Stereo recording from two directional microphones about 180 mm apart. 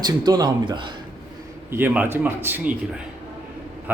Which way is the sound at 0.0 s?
20° right (ahead or behind).